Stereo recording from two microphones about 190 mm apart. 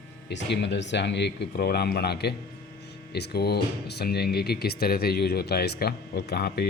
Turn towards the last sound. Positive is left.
turn(degrees=55)  # may be behind; listen again after turning